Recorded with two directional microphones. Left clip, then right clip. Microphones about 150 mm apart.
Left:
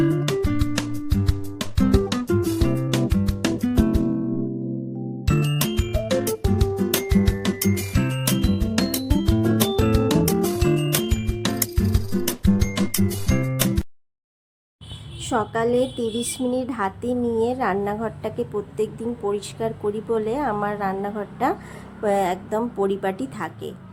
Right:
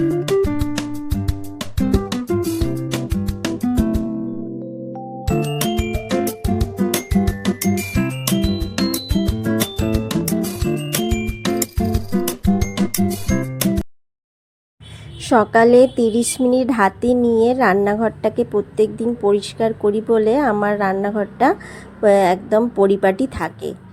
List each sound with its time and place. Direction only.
0.0 s music: centre (ahead or behind)
5.2 s music: centre (ahead or behind)
15.2 s a woman's voice: 45° right (ahead or behind)